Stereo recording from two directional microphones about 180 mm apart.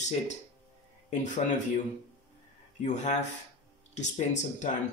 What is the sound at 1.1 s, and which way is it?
Speech, 45° left (ahead or behind).